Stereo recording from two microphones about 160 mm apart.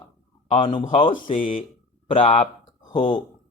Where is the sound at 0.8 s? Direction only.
45° left (ahead or behind).